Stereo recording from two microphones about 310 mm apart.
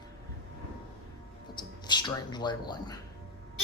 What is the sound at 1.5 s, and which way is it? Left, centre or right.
Speech, centre.